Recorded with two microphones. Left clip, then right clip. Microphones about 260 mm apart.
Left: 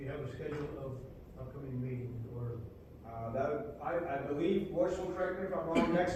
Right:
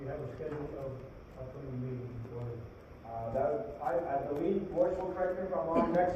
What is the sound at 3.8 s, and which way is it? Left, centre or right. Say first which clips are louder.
A man's voice: right 3 dB; left.